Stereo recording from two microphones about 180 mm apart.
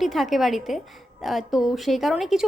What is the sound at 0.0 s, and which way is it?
A woman's voice, centre (ahead or behind).